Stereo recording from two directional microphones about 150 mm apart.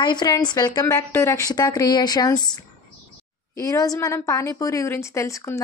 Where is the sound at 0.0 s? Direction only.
30° left (ahead or behind).